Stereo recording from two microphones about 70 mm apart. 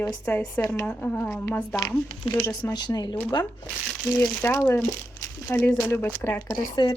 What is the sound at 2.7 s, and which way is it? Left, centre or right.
Speech, left.